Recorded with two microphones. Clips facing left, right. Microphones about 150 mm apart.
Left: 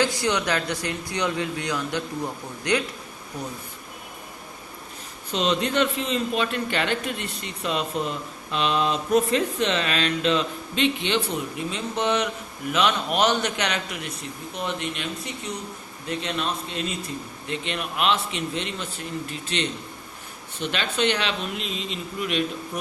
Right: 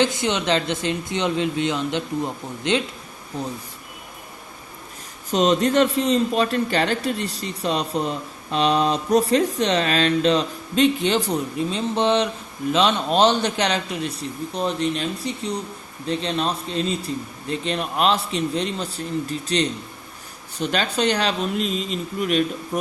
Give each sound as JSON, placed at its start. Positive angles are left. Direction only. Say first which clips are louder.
{"t": 0.0, "sound": "speech", "louder": "right 2 dB", "side_deg": -20}
{"t": 5.3, "sound": "a man's voice", "louder": "right 6 dB", "side_deg": -40}
{"t": 11.7, "sound": "a man's voice", "louder": "right 4 dB", "side_deg": -30}